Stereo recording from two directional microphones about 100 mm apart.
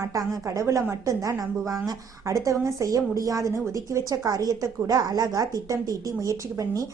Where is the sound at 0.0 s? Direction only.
35° right (ahead or behind).